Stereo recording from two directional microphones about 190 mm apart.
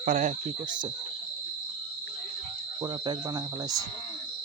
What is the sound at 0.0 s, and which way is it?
Speech, 40° right (ahead or behind).